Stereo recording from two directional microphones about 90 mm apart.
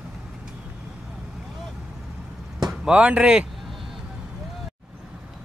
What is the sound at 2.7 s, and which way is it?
Speech, 15° right (ahead or behind).